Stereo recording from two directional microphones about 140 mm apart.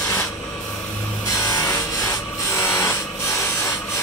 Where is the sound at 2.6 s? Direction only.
15° left (ahead or behind).